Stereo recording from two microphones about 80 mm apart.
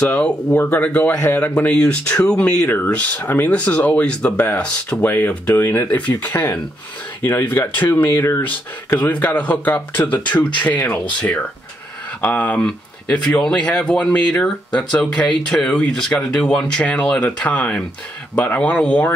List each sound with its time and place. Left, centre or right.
0.0 s speech: centre
1.7 s speech: centre